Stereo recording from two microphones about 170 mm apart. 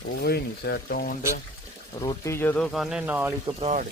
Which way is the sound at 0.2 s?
70° left (ahead or behind).